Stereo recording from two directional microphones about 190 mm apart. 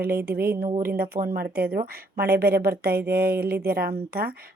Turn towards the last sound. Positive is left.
turn(degrees=-55)  # may be behind; listen again after turning